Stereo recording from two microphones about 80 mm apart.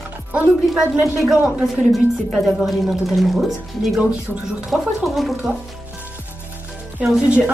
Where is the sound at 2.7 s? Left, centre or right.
Centre.